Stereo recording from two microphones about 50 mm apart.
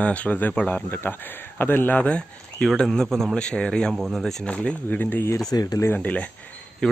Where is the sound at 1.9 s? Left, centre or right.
Left.